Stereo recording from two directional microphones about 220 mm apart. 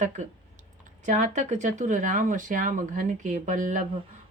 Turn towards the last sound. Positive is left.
turn(degrees=-35)  # may be behind; listen again after turning